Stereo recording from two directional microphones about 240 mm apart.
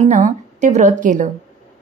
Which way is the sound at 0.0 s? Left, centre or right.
Right.